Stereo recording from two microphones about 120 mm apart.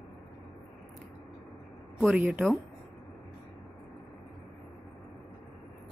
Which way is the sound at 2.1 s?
10° right (ahead or behind).